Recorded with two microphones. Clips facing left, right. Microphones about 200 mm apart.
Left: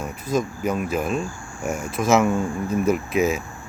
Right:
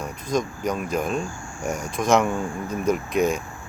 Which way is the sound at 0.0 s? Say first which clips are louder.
Left 1 dB; 5° left (ahead or behind).